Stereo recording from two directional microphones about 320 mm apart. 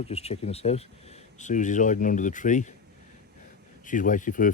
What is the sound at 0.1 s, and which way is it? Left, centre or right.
Speech, centre.